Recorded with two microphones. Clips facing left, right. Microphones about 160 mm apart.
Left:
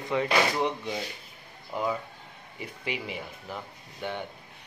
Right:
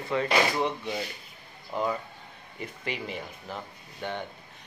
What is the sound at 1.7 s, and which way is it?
Speech, 10° left (ahead or behind).